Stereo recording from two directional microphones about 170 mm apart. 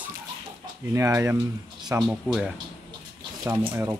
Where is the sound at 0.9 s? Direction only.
15° right (ahead or behind).